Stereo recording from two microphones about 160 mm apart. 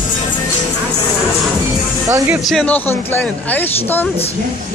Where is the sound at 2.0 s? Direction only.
15° right (ahead or behind).